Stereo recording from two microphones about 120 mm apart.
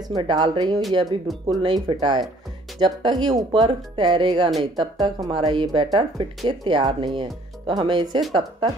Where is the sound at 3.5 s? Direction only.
45° right (ahead or behind).